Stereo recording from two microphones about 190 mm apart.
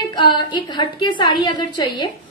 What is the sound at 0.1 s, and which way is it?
A woman's voice, 25° left (ahead or behind).